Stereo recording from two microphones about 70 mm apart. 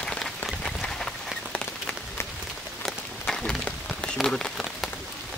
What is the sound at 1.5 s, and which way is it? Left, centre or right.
Rain on surface, centre.